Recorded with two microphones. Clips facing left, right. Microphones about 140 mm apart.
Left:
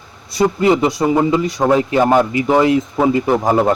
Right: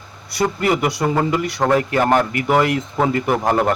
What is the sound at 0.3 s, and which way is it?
Speech, 20° left (ahead or behind).